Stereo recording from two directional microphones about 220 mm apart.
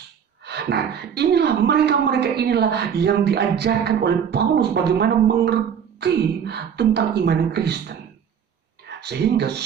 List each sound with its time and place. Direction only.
0.5 s a woman's voice: 50° right (ahead or behind)